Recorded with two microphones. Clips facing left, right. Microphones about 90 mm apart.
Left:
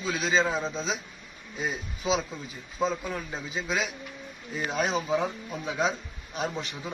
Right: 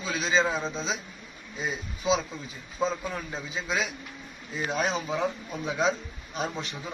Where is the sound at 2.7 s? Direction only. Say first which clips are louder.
Even; 5° left (ahead or behind).